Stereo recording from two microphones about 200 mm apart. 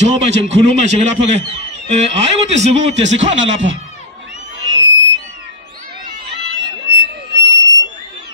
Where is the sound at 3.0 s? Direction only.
65° right (ahead or behind).